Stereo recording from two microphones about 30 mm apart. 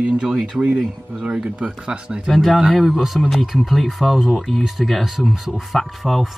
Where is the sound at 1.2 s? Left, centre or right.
Right.